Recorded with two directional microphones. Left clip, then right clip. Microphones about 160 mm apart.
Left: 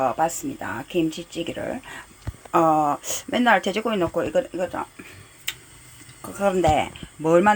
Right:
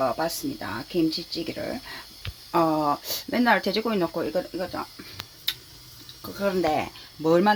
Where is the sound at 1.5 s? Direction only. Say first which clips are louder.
Left 2 dB; 10° left (ahead or behind).